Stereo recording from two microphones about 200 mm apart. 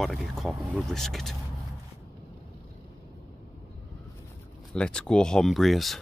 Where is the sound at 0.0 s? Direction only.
Centre (ahead or behind).